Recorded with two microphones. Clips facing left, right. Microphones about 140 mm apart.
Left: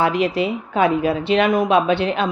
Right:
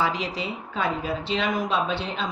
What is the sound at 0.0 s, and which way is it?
A woman's voice, 60° left (ahead or behind).